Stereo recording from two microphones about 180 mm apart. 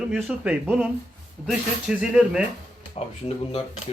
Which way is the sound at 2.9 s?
35° left (ahead or behind).